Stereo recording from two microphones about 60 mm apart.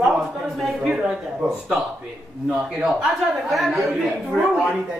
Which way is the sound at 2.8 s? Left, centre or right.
Centre.